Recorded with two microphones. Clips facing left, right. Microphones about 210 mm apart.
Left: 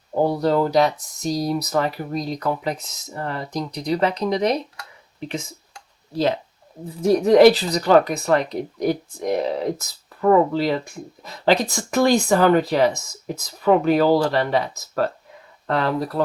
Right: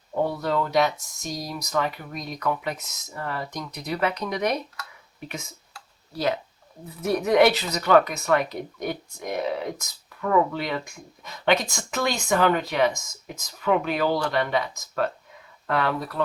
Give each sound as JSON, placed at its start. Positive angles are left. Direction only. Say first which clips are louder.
{"t": 0.1, "sound": "speech", "louder": "left 6 dB", "side_deg": 30}
{"t": 6.1, "sound": "speech", "louder": "left 5 dB", "side_deg": 30}